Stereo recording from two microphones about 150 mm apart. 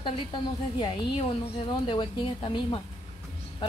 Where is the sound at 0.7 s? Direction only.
30° left (ahead or behind).